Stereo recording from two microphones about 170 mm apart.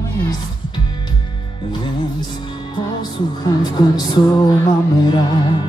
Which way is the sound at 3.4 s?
25° left (ahead or behind).